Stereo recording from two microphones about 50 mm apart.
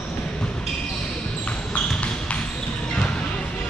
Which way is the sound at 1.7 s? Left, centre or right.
Left.